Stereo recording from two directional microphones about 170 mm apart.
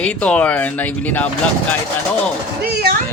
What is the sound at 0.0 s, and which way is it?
Speech, 5° left (ahead or behind).